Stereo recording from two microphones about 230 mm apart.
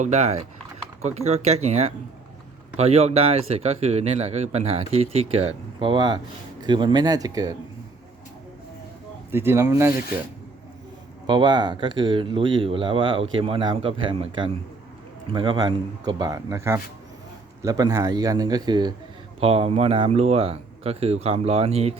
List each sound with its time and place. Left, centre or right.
0.0 s a man's voice: right
9.3 s a man's voice: centre
11.3 s a man's voice: centre